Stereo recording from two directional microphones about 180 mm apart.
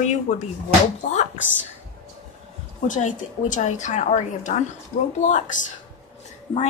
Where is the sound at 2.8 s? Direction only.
45° left (ahead or behind).